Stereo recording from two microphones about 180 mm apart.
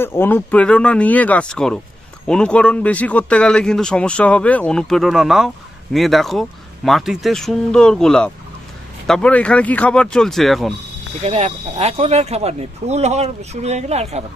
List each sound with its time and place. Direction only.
0.0 s speech: 10° left (ahead or behind)
11.2 s speech: 35° right (ahead or behind)